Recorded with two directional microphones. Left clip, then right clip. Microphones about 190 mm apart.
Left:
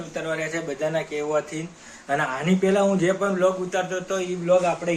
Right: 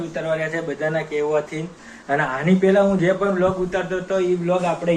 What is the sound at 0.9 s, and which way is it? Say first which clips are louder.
A man's voice: right 5 dB; 15° left (ahead or behind).